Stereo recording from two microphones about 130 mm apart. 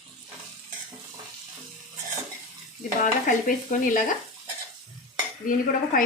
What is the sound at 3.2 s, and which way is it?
Dishes, 90° left.